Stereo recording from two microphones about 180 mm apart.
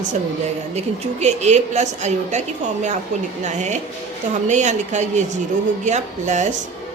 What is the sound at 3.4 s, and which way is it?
A woman's voice, 40° right (ahead or behind).